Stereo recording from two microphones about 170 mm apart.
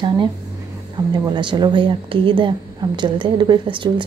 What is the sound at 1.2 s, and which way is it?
Speech, 25° right (ahead or behind).